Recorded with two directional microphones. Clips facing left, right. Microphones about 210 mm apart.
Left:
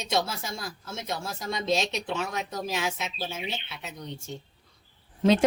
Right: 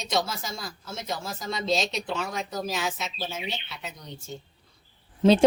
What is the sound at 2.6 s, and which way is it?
Speech, 15° left (ahead or behind).